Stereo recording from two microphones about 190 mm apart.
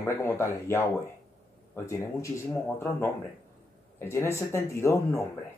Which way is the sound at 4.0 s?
15° left (ahead or behind).